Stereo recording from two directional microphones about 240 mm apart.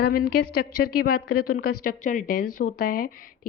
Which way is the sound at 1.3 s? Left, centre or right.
Left.